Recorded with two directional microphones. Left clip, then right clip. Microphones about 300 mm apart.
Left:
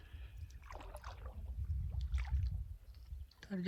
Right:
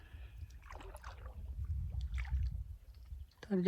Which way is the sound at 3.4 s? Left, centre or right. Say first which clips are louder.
Right 9 dB; centre.